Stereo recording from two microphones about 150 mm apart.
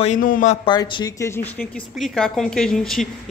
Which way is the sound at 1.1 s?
15° left (ahead or behind).